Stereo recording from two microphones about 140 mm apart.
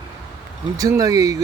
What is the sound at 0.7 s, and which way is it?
Speech, 25° right (ahead or behind).